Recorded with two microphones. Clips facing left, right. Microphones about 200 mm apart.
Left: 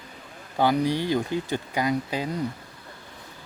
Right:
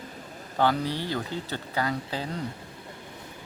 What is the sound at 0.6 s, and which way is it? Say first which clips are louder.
Speech: left 3 dB; 15° left (ahead or behind).